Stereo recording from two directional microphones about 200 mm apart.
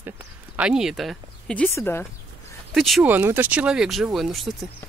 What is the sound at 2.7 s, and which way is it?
Speech, centre (ahead or behind).